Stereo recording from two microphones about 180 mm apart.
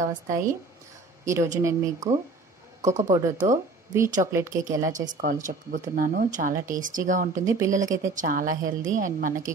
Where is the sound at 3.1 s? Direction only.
20° right (ahead or behind).